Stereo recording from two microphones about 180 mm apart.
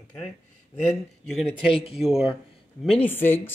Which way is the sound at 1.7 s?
30° left (ahead or behind).